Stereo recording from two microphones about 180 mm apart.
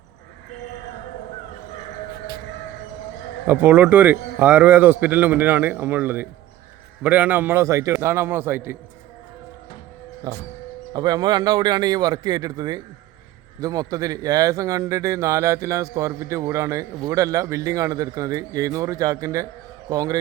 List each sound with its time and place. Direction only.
3.4 s a man's voice: 10° right (ahead or behind)
10.3 s a man's voice: 20° right (ahead or behind)